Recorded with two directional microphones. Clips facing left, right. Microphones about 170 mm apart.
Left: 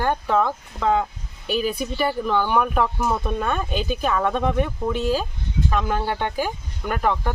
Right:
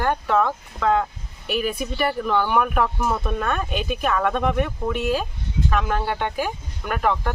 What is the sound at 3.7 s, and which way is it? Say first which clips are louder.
Speech: left 1 dB; 30° left (ahead or behind).